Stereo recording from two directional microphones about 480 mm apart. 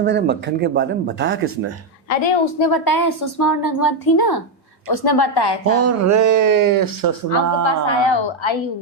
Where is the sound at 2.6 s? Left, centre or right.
Left.